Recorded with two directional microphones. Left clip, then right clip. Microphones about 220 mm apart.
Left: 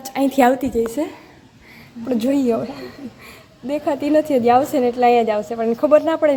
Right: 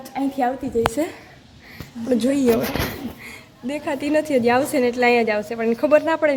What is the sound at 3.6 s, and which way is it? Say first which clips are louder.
A woman's voice: left 4 dB; 10° left (ahead or behind).